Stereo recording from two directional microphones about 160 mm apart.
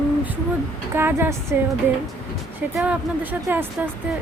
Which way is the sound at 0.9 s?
15° right (ahead or behind).